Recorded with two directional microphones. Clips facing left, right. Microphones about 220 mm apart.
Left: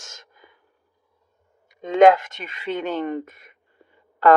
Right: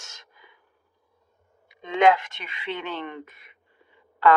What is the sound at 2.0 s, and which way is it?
Speech, 45° left (ahead or behind).